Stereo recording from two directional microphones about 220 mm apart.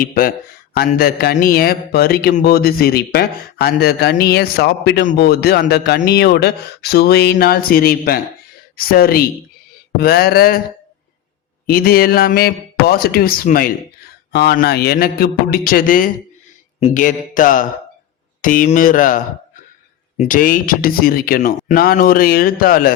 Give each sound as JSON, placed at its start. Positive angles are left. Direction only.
{"t": 0.0, "sound": "a man's voice", "side_deg": 40}
{"t": 11.6, "sound": "a man's voice", "side_deg": 40}